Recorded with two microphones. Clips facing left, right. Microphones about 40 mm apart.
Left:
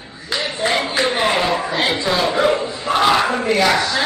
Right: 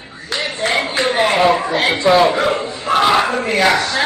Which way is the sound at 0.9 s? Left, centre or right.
Right.